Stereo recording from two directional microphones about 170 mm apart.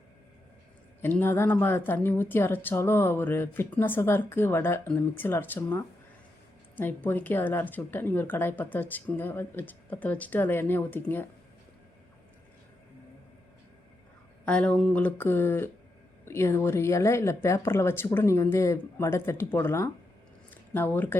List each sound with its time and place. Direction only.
1.0 s speech: 15° left (ahead or behind)
14.4 s speech: 5° left (ahead or behind)